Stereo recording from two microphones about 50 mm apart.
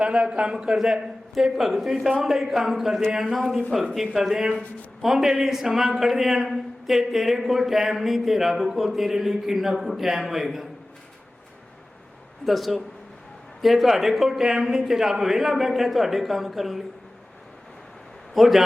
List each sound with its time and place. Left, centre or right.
0.0 s a man's voice: centre
0.8 s speech: centre
12.5 s speech: centre
18.3 s speech: centre